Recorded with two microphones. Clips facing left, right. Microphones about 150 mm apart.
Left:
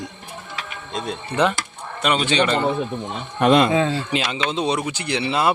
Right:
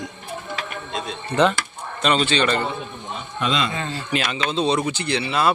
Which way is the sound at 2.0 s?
15° left (ahead or behind).